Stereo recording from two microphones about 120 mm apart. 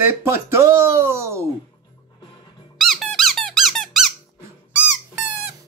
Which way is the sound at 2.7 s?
Centre (ahead or behind).